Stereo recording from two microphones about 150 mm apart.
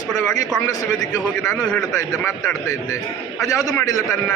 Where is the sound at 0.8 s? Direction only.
25° left (ahead or behind).